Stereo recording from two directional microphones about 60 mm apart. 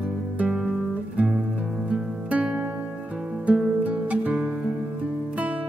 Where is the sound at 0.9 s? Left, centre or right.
Right.